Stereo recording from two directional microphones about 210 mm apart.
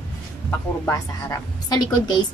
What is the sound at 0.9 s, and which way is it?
A woman's voice, 20° left (ahead or behind).